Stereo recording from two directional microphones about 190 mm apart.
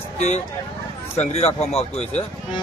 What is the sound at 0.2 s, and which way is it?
A man's voice, 35° left (ahead or behind).